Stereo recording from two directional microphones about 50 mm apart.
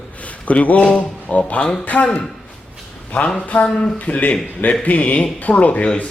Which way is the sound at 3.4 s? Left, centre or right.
Left.